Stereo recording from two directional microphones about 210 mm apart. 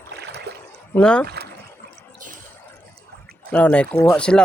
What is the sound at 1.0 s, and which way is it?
Speech, 5° left (ahead or behind).